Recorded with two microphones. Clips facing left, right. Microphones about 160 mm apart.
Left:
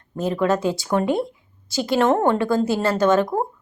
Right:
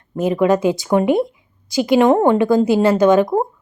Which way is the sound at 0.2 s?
15° right (ahead or behind).